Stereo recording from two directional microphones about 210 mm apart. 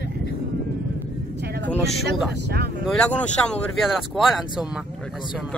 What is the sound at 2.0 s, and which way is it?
Speech, 50° right (ahead or behind).